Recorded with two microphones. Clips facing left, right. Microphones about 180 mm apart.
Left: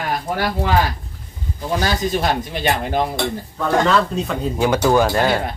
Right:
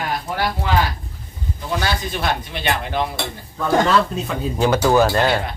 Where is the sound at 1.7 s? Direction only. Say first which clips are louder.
Left 4 dB; 40° left (ahead or behind).